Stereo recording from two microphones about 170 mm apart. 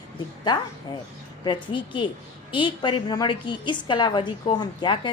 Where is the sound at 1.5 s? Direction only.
30° left (ahead or behind).